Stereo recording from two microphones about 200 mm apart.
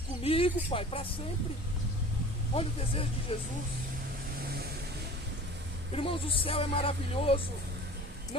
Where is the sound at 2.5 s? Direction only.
30° left (ahead or behind).